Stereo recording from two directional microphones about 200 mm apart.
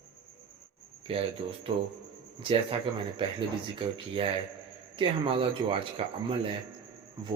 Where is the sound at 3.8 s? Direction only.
25° right (ahead or behind).